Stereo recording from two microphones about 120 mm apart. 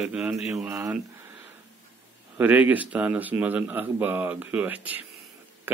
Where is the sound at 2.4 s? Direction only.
15° right (ahead or behind).